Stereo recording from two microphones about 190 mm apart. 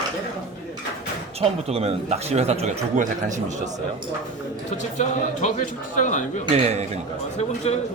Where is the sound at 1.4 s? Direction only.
30° right (ahead or behind).